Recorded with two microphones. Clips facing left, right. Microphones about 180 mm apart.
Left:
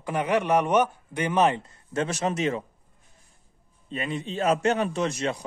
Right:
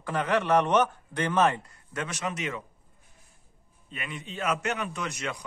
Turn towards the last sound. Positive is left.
turn(degrees=30)  # may be behind; listen again after turning